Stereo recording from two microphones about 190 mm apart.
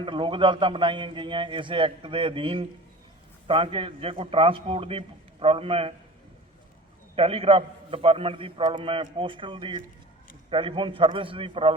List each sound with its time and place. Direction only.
0.0 s a man's voice: 25° right (ahead or behind)
7.2 s a man's voice: 30° right (ahead or behind)